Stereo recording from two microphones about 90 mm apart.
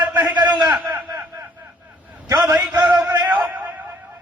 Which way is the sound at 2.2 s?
50° right (ahead or behind).